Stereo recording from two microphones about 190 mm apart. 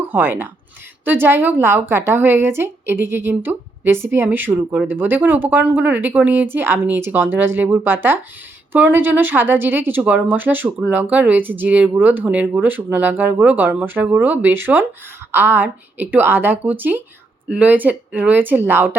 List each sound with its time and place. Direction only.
0.1 s a woman's voice: 10° right (ahead or behind)